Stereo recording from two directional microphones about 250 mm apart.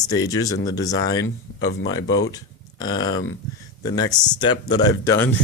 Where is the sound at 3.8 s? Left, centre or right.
Centre.